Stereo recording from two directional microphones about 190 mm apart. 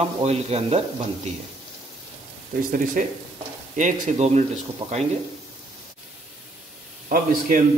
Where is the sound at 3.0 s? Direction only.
40° right (ahead or behind).